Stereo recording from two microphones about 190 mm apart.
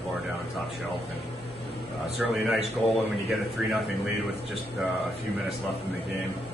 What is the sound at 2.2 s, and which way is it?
Speech, centre (ahead or behind).